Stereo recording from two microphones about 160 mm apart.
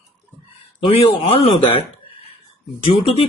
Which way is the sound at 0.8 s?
40° left (ahead or behind).